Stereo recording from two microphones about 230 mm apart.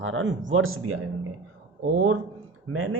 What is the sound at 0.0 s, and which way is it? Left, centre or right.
Speech, right.